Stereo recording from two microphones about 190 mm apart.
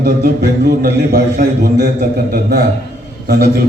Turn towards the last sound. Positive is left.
turn(degrees=-60)  # may be behind; listen again after turning